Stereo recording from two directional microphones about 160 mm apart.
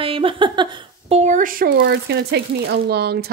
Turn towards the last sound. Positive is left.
turn(degrees=-85)